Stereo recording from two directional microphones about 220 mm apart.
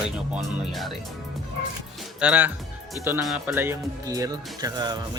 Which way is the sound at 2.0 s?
5° right (ahead or behind).